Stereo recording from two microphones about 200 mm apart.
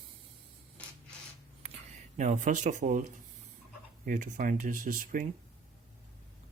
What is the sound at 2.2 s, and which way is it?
Speech, 40° right (ahead or behind).